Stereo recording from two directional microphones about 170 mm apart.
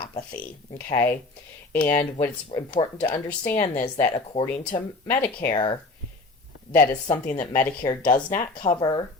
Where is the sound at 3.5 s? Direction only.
50° left (ahead or behind).